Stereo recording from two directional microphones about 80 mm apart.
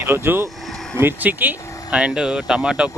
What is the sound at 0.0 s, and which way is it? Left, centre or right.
Speech, right.